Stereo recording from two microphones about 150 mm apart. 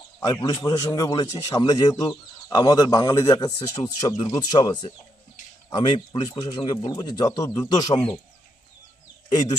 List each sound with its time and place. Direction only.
0.2 s a man's voice: 25° left (ahead or behind)